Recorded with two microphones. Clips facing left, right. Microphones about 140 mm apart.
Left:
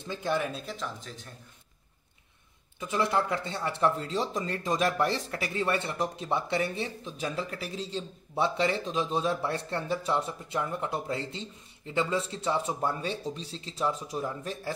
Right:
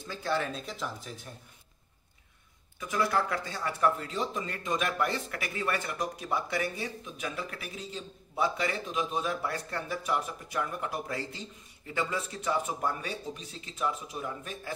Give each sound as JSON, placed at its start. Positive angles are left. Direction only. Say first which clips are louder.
{"t": 0.0, "sound": "speech", "louder": "left 2 dB", "side_deg": 20}
{"t": 0.5, "sound": "speech", "louder": "left 1 dB", "side_deg": 0}
{"t": 1.1, "sound": "speech", "louder": "right 1 dB", "side_deg": -10}
{"t": 2.8, "sound": "speech", "louder": "left 1 dB", "side_deg": 25}